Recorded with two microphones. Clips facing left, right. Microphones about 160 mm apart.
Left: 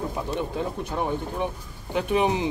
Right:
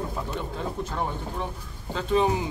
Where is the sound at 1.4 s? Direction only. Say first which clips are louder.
Left 5 dB; 15° left (ahead or behind).